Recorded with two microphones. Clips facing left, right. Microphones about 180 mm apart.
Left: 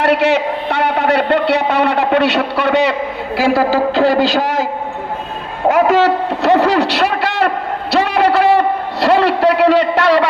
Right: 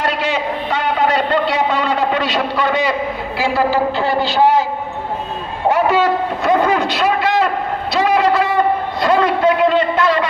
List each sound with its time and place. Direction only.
0.0 s a man's voice: 70° left (ahead or behind)
3.5 s a man's voice: 90° left
6.0 s a man's voice: 75° left (ahead or behind)
7.9 s a sound: 65° left (ahead or behind)